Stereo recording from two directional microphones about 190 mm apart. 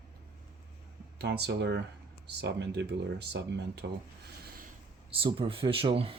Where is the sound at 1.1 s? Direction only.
60° right (ahead or behind).